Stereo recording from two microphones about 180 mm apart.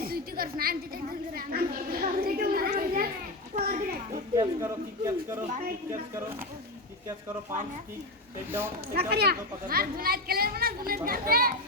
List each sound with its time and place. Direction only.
0.0 s a sound: 55° right (ahead or behind)
1.4 s a child's voice: 55° right (ahead or behind)
4.4 s a man's voice: 15° right (ahead or behind)
8.9 s speech: 60° right (ahead or behind)